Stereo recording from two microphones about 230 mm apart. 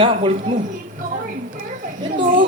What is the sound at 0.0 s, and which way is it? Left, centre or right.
Speech, right.